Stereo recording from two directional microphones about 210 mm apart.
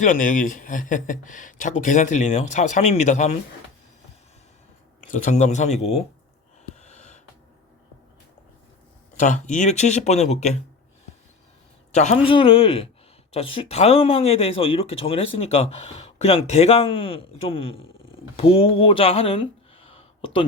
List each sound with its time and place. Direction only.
0.0 s speech: 40° left (ahead or behind)
5.0 s speech: 35° left (ahead or behind)
6.8 s a sound: 35° left (ahead or behind)
9.1 s speech: 35° left (ahead or behind)
11.9 s speech: 30° left (ahead or behind)